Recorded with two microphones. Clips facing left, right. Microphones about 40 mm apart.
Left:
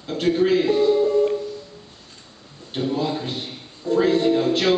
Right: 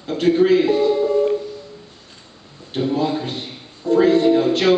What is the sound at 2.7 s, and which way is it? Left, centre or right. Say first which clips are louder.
A man's voice: right 4 dB; centre.